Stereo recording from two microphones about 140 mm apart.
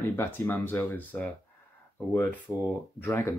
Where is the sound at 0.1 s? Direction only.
15° left (ahead or behind).